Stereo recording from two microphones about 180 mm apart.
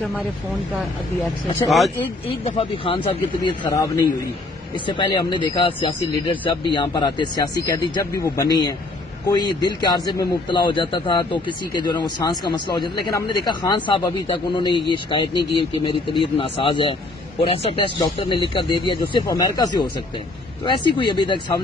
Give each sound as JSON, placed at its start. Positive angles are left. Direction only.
{"t": 2.4, "sound": "speech", "side_deg": 30}